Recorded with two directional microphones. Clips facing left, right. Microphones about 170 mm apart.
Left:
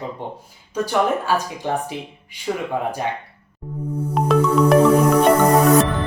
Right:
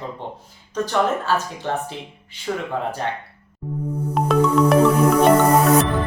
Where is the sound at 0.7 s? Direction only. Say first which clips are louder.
Left 1 dB; 10° left (ahead or behind).